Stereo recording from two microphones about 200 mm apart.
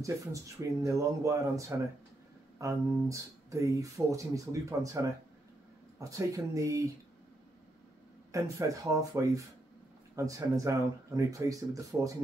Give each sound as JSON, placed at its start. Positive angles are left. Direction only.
{"t": 0.0, "sound": "speech", "side_deg": -15}
{"t": 8.3, "sound": "speech", "side_deg": -15}